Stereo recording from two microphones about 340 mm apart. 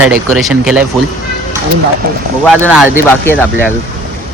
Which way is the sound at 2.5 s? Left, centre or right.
Centre.